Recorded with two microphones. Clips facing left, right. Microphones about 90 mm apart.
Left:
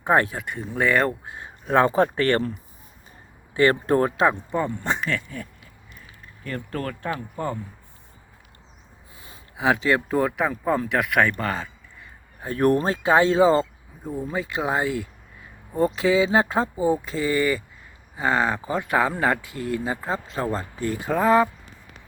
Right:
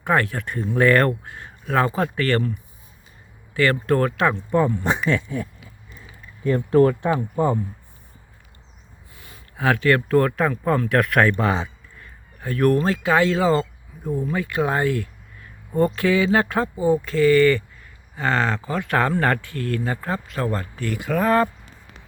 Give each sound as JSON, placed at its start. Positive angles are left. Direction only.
{"t": 0.0, "sound": "speech", "side_deg": 20}
{"t": 0.3, "sound": "speech", "side_deg": 5}
{"t": 1.2, "sound": "speech", "side_deg": 20}
{"t": 3.5, "sound": "speech", "side_deg": 20}
{"t": 4.5, "sound": "speech", "side_deg": 0}
{"t": 4.8, "sound": "speech", "side_deg": -15}
{"t": 9.1, "sound": "speech", "side_deg": 25}
{"t": 11.3, "sound": "speech", "side_deg": -15}
{"t": 12.4, "sound": "speech", "side_deg": 25}
{"t": 14.0, "sound": "speech", "side_deg": 5}
{"t": 14.3, "sound": "speech", "side_deg": 20}
{"t": 18.9, "sound": "speech", "side_deg": 10}